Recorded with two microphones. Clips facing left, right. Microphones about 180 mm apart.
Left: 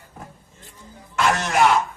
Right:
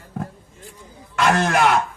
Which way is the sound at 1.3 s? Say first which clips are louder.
Right 5 dB; 55° right (ahead or behind).